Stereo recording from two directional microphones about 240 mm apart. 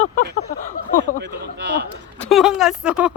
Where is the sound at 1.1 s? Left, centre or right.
Right.